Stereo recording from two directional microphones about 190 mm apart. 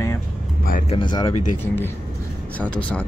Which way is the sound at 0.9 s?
25° left (ahead or behind).